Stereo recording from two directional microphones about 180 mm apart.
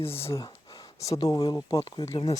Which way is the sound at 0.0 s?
15° left (ahead or behind).